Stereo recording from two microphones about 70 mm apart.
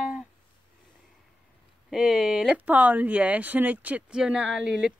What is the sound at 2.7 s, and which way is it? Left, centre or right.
Speech, right.